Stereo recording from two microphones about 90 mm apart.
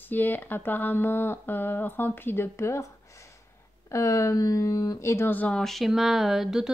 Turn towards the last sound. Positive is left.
turn(degrees=-5)  # may be behind; listen again after turning